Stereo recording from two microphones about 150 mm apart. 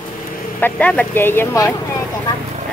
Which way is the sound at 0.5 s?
10° left (ahead or behind).